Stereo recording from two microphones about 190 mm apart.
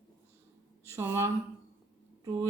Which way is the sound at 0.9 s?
15° right (ahead or behind).